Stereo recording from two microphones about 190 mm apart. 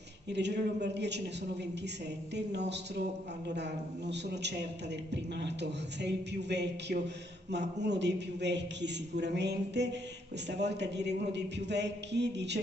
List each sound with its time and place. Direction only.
0.3 s a man's voice: 65° right (ahead or behind)
2.3 s a man's voice: 65° right (ahead or behind)